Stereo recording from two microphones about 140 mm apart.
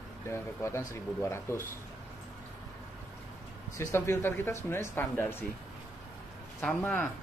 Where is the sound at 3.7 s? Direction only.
20° left (ahead or behind).